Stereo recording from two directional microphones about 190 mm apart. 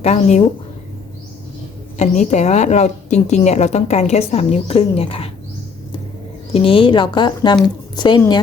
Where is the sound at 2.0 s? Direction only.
35° left (ahead or behind).